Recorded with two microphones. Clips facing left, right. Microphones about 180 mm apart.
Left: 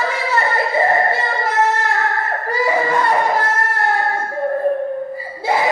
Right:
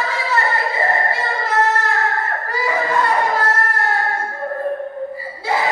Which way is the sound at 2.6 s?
20° left (ahead or behind).